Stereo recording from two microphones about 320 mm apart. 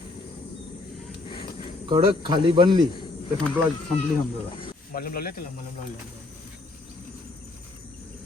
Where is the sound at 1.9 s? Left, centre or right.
Centre.